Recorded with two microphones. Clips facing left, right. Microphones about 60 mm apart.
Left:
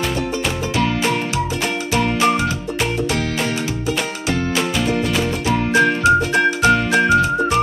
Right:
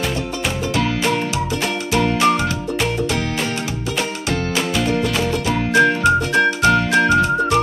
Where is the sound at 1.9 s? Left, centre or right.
Centre.